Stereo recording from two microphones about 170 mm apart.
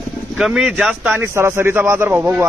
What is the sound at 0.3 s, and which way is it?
A man's voice, 5° right (ahead or behind).